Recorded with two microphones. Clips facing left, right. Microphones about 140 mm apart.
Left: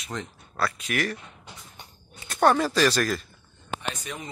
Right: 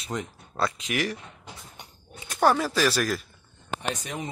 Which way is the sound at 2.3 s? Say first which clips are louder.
Left 1 dB; 5° right (ahead or behind).